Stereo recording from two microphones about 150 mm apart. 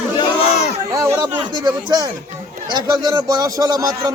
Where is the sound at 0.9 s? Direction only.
20° right (ahead or behind).